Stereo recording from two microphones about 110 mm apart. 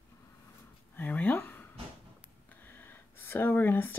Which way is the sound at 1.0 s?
15° left (ahead or behind).